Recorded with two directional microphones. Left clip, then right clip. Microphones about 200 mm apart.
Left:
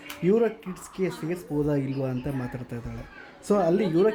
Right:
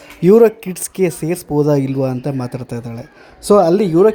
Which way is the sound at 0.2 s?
40° right (ahead or behind).